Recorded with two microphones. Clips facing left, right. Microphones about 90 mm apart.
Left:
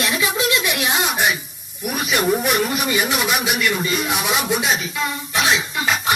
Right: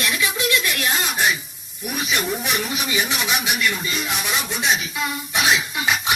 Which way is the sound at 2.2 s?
45° left (ahead or behind).